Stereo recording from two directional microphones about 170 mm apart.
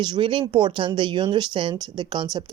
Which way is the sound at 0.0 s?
30° right (ahead or behind).